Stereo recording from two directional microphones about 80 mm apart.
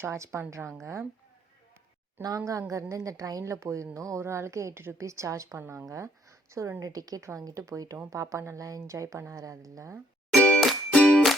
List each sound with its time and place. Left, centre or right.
0.0 s a woman's voice: right
2.2 s a woman's voice: right
10.3 s music: centre